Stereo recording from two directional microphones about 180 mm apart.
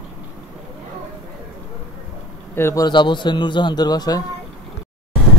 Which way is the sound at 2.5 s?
15° left (ahead or behind).